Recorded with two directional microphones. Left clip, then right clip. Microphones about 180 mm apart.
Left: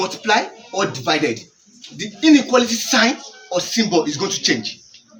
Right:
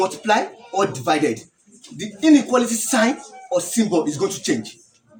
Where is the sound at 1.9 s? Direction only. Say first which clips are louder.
Left 2 dB; 30° right (ahead or behind).